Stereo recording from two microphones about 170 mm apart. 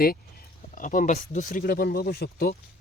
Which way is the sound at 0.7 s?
50° left (ahead or behind).